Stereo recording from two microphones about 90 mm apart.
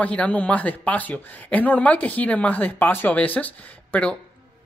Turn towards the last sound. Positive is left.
turn(degrees=15)  # may be behind; listen again after turning